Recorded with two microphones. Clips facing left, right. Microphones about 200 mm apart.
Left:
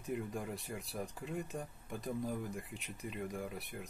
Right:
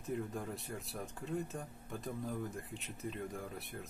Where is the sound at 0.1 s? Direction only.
5° left (ahead or behind).